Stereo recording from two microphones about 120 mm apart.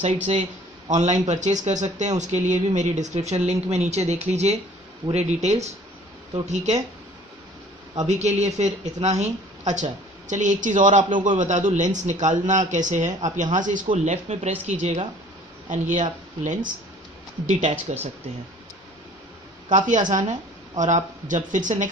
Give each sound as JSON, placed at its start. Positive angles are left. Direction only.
{"t": 0.3, "sound": "speech", "side_deg": -80}
{"t": 8.1, "sound": "speech", "side_deg": -70}
{"t": 13.9, "sound": "speech", "side_deg": -70}
{"t": 15.7, "sound": "speech", "side_deg": -90}
{"t": 17.9, "sound": "speech", "side_deg": -70}
{"t": 20.1, "sound": "speech", "side_deg": -90}